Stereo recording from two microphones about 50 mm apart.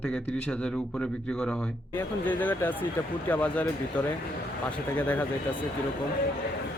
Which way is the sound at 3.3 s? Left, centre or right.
Left.